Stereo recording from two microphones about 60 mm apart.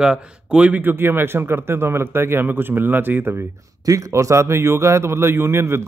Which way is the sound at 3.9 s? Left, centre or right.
Right.